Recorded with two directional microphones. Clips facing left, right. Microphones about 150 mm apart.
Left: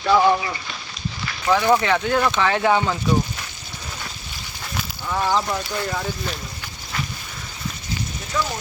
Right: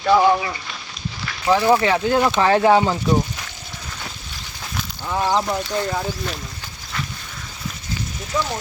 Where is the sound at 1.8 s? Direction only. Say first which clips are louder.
Right 2 dB; 30° right (ahead or behind).